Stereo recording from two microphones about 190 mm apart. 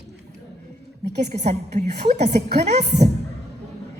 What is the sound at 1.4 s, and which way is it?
A woman's voice, 35° right (ahead or behind).